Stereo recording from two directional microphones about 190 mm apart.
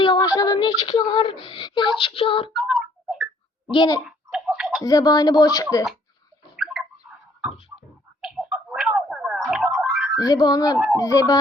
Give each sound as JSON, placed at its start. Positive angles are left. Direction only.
{"t": 0.0, "sound": "female singing", "side_deg": 25}
{"t": 2.6, "sound": "tick-tock", "side_deg": 0}
{"t": 3.7, "sound": "speech", "side_deg": 20}
{"t": 4.0, "sound": "tick-tock", "side_deg": -5}
{"t": 4.8, "sound": "speech", "side_deg": 20}
{"t": 6.6, "sound": "bird", "side_deg": 0}
{"t": 8.2, "sound": "a sound", "side_deg": 0}
{"t": 10.2, "sound": "speech", "side_deg": 20}